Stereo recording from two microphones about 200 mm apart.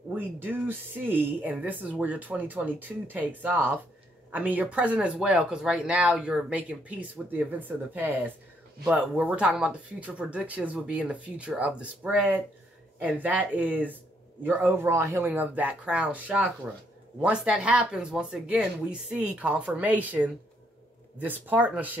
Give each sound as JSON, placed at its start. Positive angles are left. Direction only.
{"t": 0.1, "sound": "speech", "side_deg": -10}